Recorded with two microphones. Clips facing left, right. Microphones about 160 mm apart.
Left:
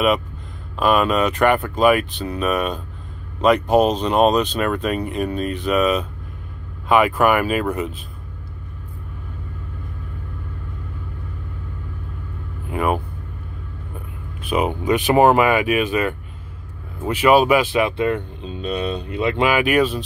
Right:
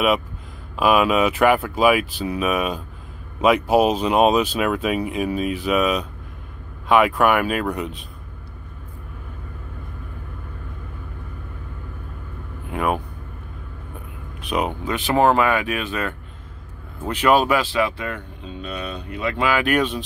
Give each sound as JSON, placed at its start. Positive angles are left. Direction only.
{"t": 0.7, "sound": "speech", "side_deg": -5}
{"t": 12.6, "sound": "vehicle", "side_deg": 0}
{"t": 14.4, "sound": "speech", "side_deg": 0}
{"t": 14.7, "sound": "speech", "side_deg": 15}
{"t": 19.6, "sound": "speech", "side_deg": 5}